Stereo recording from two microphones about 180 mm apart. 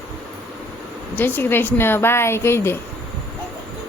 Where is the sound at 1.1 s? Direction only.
10° left (ahead or behind).